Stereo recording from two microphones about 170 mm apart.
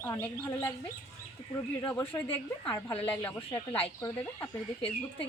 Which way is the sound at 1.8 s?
15° left (ahead or behind).